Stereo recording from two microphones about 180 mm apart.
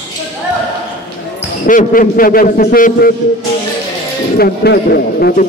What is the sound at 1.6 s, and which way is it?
A man's voice, 50° left (ahead or behind).